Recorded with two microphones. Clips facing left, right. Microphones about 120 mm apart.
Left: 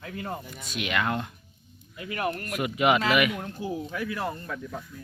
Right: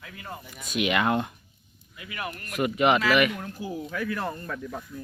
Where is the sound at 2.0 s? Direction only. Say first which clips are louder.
Left 6 dB; 40° left (ahead or behind).